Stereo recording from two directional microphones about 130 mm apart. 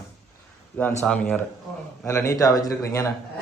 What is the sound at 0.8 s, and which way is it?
Speech, 10° left (ahead or behind).